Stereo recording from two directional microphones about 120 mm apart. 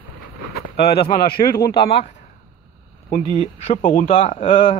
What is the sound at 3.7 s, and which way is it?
Speech, 80° left.